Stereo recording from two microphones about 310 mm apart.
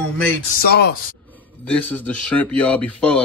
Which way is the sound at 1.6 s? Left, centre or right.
Centre.